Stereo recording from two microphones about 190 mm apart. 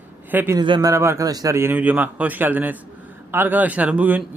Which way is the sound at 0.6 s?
20° right (ahead or behind).